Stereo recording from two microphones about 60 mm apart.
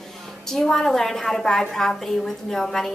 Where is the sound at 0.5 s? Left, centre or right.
Centre.